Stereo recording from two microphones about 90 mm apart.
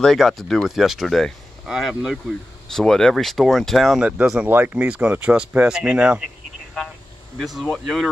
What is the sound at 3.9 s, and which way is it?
Speech, 15° right (ahead or behind).